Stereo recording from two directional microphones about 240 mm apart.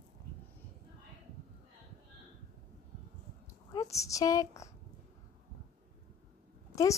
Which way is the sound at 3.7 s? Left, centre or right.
Centre.